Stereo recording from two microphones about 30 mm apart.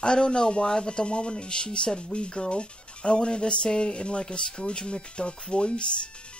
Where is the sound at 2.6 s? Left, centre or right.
Left.